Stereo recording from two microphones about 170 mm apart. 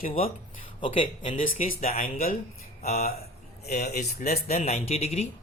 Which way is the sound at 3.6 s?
70° left (ahead or behind).